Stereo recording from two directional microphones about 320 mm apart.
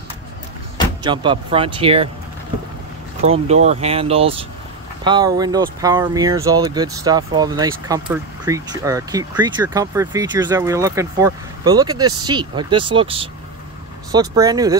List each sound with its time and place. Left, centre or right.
1.0 s speech: centre
3.2 s speech: right